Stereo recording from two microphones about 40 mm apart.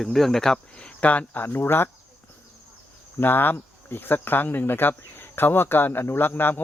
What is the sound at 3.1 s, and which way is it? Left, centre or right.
Speech, left.